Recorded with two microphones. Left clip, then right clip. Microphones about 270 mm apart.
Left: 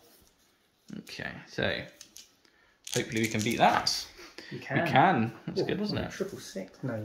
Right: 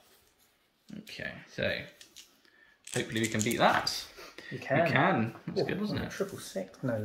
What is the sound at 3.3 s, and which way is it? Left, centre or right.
Speech, centre.